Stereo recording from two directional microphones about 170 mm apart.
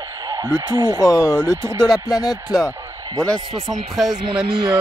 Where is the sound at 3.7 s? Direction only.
Centre (ahead or behind).